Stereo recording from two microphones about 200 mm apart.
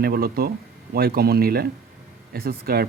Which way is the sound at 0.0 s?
50° right (ahead or behind).